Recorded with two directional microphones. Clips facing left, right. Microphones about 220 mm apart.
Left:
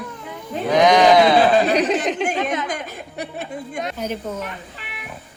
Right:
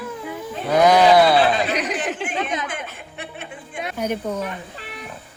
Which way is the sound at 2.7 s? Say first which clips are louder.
Left 4 dB; 40° left (ahead or behind).